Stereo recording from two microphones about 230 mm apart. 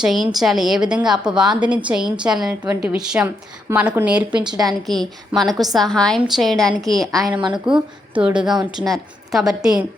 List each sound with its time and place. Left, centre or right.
0.0 s a woman's voice: centre
4.4 s a woman's voice: centre
4.9 s a woman's voice: centre